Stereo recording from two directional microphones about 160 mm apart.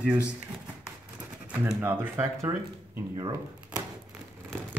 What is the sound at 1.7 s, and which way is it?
Speech, 15° right (ahead or behind).